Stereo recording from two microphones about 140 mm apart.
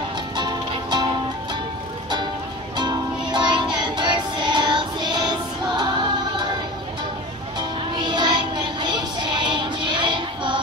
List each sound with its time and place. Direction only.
0.4 s music: 30° right (ahead or behind)
2.8 s music: 30° right (ahead or behind)
3.7 s child singing: 35° right (ahead or behind)
7.5 s music: 30° right (ahead or behind)